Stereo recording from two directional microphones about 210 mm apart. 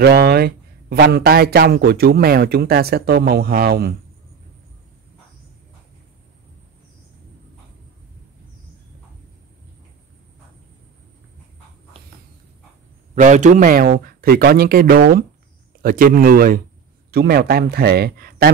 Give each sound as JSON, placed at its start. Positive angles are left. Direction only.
{"t": 0.0, "sound": "a man's voice", "side_deg": -50}
{"t": 11.9, "sound": "a sound", "side_deg": -25}
{"t": 13.1, "sound": "a man's voice", "side_deg": -35}